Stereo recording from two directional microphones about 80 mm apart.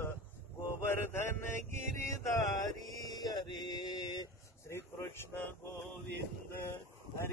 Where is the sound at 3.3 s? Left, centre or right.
Left.